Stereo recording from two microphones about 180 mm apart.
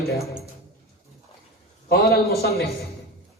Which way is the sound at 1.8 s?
60° left (ahead or behind).